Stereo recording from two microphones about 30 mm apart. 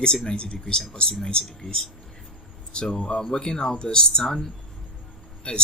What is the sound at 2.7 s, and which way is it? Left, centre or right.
Speech, left.